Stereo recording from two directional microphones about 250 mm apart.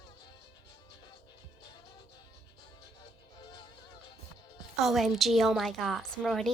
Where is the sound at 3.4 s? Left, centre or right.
Centre.